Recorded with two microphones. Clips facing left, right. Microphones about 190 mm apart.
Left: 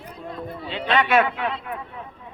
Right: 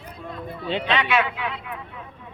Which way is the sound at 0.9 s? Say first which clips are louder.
Left 5 dB; 50° left (ahead or behind).